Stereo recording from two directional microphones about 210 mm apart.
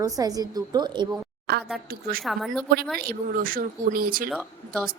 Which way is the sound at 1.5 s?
50° right (ahead or behind).